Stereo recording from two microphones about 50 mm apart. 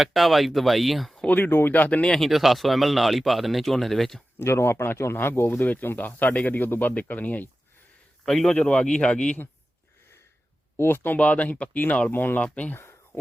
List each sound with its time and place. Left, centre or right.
0.0 s speech: centre
1.5 s speech: left
1.7 s speech: left
2.1 s speech: centre
4.4 s speech: left
5.5 s speech: left
8.2 s a man's voice: centre
8.5 s speech: centre
10.8 s speech: left
11.2 s speech: left
12.1 s speech: left